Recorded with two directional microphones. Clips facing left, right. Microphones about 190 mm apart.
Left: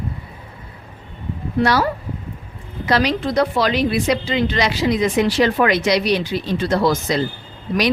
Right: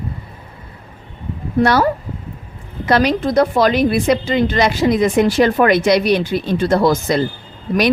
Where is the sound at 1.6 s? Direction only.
55° right (ahead or behind).